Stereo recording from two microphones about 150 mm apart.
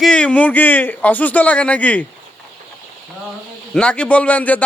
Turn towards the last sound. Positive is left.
turn(degrees=10)  # may be behind; listen again after turning